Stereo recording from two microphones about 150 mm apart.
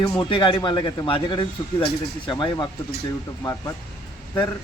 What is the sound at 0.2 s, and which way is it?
Speech, 30° left (ahead or behind).